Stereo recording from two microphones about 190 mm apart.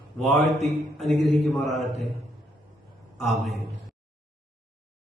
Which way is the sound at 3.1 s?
Centre (ahead or behind).